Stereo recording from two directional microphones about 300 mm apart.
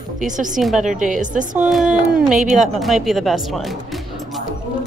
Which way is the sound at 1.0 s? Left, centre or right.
Right.